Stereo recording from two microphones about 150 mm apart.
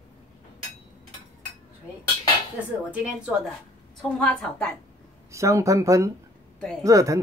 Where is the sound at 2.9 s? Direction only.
5° right (ahead or behind).